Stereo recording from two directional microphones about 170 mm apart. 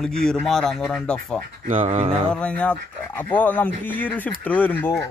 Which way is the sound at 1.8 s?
35° right (ahead or behind).